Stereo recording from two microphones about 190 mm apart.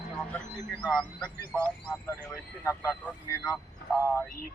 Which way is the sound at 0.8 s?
5° left (ahead or behind).